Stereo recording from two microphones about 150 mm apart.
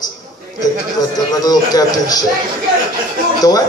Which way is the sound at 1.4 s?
25° left (ahead or behind).